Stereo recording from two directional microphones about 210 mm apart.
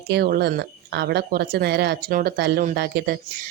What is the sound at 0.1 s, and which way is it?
Speech, 50° right (ahead or behind).